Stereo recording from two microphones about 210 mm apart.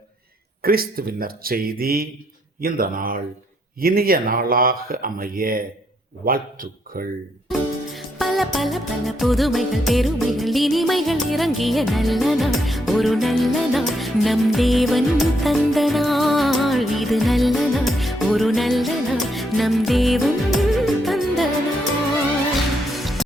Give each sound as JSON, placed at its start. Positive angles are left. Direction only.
{"t": 0.6, "sound": "speech", "side_deg": -45}
{"t": 7.9, "sound": "music", "side_deg": 0}
{"t": 23.0, "sound": "music", "side_deg": 0}